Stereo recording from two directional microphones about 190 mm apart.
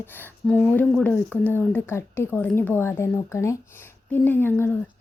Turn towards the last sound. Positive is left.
turn(degrees=10)  # may be behind; listen again after turning